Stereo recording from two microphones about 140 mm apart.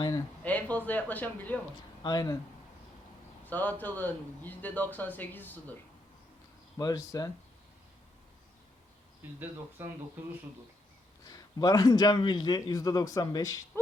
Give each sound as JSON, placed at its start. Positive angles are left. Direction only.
{"t": 0.4, "sound": "a man's voice", "side_deg": 10}
{"t": 2.0, "sound": "a man's voice", "side_deg": 30}
{"t": 3.4, "sound": "a man's voice", "side_deg": 10}
{"t": 6.7, "sound": "a man's voice", "side_deg": 25}
{"t": 9.4, "sound": "speech", "side_deg": -15}
{"t": 11.3, "sound": "a man's voice", "side_deg": 30}